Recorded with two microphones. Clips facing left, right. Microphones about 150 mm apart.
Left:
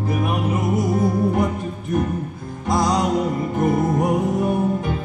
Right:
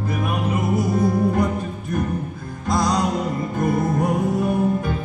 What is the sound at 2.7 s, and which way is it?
Music, 20° left (ahead or behind).